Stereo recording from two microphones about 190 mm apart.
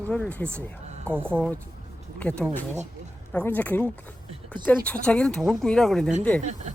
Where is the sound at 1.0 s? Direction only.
10° right (ahead or behind).